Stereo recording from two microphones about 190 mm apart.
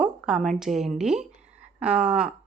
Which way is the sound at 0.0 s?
5° right (ahead or behind).